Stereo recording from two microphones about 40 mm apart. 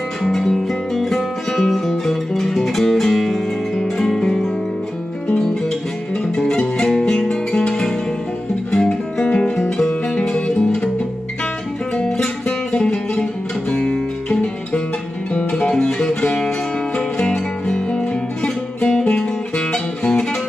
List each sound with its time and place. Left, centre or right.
0.2 s music: centre
5.3 s guitar: centre
6.3 s music: centre
8.7 s guitar: centre
9.7 s music: centre
12.1 s music: centre
13.1 s guitar: left
15.7 s music: centre